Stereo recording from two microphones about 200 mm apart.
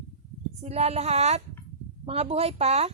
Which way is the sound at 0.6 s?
30° right (ahead or behind).